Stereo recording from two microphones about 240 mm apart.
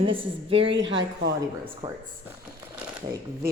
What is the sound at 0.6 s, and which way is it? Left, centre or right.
Speech, right.